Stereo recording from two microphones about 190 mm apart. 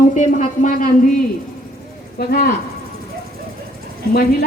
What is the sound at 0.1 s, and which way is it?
Speech, 40° left (ahead or behind).